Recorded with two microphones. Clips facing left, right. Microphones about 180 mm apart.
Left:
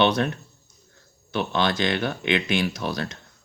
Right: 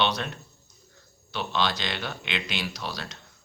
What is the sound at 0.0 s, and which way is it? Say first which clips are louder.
Speech: left 6 dB; 55° left (ahead or behind).